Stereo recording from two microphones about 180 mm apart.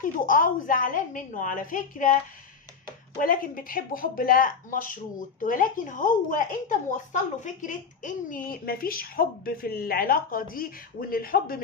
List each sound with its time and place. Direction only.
0.0 s a woman's voice: 50° left (ahead or behind)
3.2 s a woman's voice: 50° left (ahead or behind)